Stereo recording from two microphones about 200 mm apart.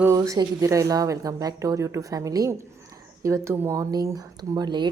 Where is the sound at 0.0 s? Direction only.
15° right (ahead or behind).